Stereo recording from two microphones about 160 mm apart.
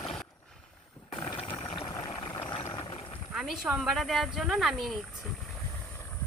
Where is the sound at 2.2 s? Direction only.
20° left (ahead or behind).